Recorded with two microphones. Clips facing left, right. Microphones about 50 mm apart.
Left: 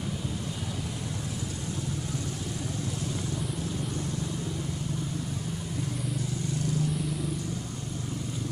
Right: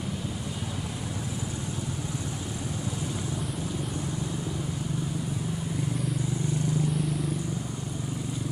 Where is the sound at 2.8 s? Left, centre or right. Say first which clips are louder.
Right 1 dB; centre.